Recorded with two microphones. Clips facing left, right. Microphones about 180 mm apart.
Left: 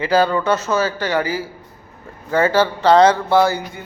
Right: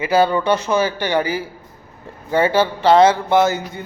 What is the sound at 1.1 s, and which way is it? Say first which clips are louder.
Music: right 1 dB; 20° right (ahead or behind).